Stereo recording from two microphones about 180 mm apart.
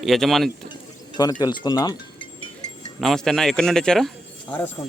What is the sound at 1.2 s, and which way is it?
Speech, 20° left (ahead or behind).